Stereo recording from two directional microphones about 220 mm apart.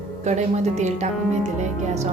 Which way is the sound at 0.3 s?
30° right (ahead or behind).